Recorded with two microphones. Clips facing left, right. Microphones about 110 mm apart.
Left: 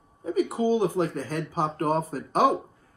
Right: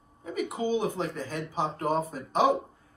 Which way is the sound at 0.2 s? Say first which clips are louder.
Left 6 dB; 35° left (ahead or behind).